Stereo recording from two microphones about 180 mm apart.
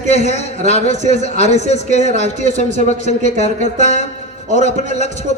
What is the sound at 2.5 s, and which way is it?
Speech, 45° right (ahead or behind).